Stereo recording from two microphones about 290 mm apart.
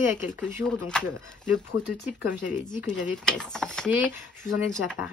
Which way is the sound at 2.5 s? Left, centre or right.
Left.